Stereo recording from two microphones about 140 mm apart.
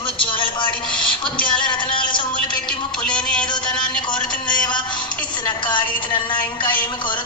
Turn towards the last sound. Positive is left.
turn(degrees=35)  # may be behind; listen again after turning